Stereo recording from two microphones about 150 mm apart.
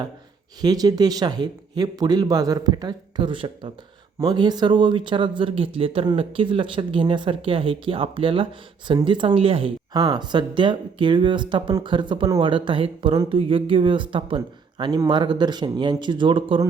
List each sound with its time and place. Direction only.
0.6 s speech: 25° right (ahead or behind)